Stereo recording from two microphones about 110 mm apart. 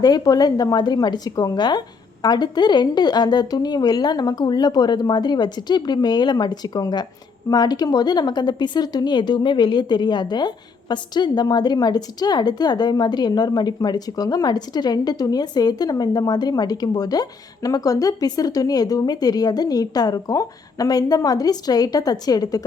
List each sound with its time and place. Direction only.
0.0 s a woman's voice: 35° left (ahead or behind)